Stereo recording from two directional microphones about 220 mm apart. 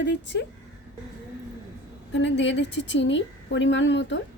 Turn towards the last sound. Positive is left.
turn(degrees=55)  # may be behind; listen again after turning